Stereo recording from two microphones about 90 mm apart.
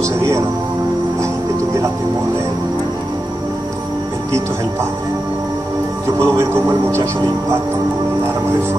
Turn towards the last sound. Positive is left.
turn(degrees=-30)  # may be behind; listen again after turning